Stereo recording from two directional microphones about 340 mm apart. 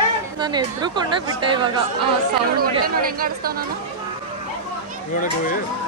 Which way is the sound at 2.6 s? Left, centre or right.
Right.